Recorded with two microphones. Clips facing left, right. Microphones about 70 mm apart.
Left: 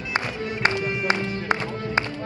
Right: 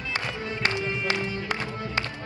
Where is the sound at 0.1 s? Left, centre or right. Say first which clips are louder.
Left 5 dB; left.